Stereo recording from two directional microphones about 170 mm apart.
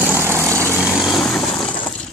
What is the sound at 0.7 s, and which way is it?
Vehicle, 5° right (ahead or behind).